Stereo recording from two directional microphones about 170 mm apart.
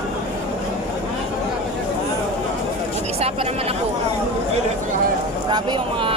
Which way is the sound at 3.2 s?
35° right (ahead or behind).